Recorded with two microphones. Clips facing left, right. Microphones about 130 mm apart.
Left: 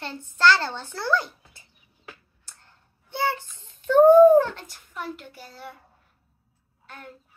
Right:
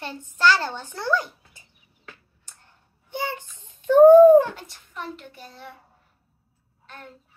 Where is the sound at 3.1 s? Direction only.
15° right (ahead or behind).